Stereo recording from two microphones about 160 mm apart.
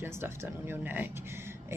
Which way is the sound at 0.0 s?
15° right (ahead or behind).